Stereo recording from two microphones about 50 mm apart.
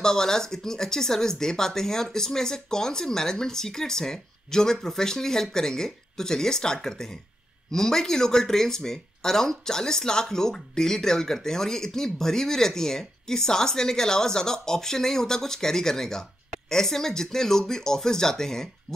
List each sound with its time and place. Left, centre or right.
0.0 s speech: centre